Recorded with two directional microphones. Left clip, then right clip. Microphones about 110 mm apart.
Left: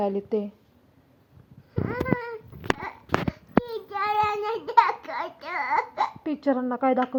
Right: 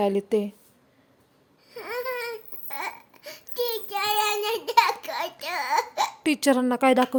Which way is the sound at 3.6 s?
30° right (ahead or behind).